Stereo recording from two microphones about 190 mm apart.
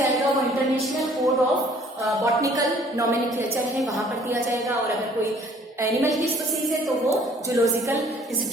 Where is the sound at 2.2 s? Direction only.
20° right (ahead or behind).